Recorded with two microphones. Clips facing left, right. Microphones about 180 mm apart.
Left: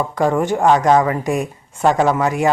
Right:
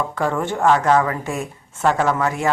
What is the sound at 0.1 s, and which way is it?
Speech, 15° left (ahead or behind).